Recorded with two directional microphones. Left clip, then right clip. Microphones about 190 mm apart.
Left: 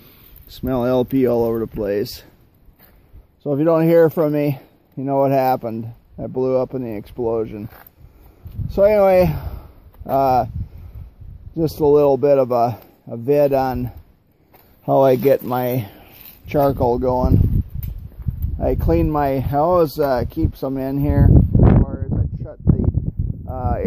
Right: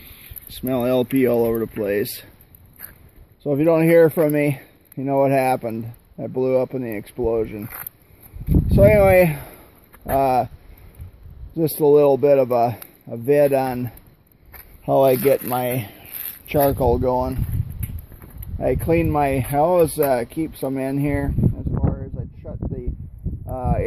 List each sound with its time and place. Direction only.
0.5 s speech: 15° left (ahead or behind)
3.4 s speech: 5° left (ahead or behind)
11.5 s speech: 10° left (ahead or behind)
18.6 s speech: 5° left (ahead or behind)
23.4 s a sound: 5° left (ahead or behind)